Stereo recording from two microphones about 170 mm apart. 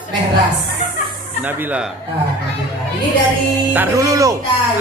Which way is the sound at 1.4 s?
10° right (ahead or behind).